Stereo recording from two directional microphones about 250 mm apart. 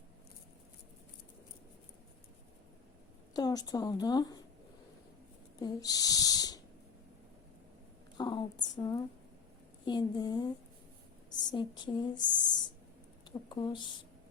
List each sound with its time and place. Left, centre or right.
3.3 s speech: centre
5.5 s speech: centre
8.2 s a sound: centre
9.8 s speech: centre
13.5 s speech: centre